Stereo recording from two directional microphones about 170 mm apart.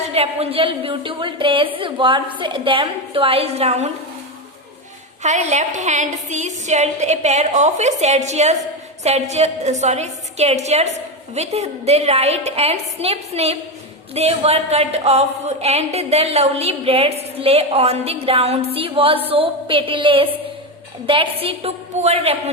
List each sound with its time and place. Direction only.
0.1 s a woman's voice: 35° right (ahead or behind)
5.2 s a woman's voice: 45° right (ahead or behind)